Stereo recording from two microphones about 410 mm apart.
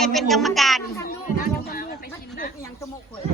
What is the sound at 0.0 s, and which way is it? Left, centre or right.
A child's voice, centre.